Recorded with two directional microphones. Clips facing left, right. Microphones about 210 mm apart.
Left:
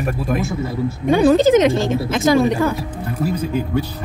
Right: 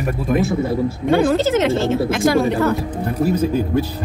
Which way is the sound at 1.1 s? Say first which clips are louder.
Left 4 dB; 15° left (ahead or behind).